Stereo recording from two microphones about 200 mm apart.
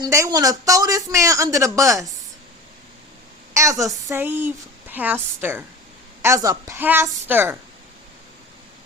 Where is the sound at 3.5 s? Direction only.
15° right (ahead or behind).